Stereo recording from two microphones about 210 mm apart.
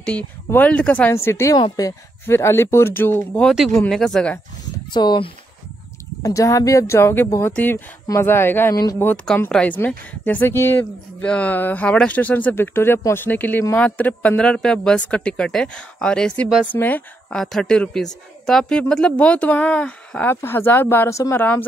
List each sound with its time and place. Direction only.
0.0 s speech: 5° left (ahead or behind)
4.9 s speech: 20° left (ahead or behind)